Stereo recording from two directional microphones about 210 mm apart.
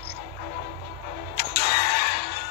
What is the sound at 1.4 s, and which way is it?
Music, 50° left (ahead or behind).